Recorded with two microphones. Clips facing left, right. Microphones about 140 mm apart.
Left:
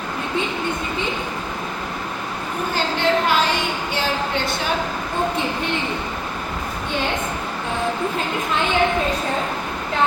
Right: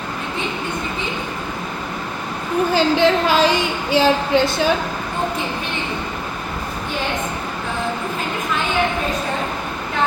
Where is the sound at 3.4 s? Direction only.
90° right.